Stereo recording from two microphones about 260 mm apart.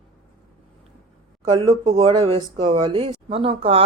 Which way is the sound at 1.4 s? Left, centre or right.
Centre.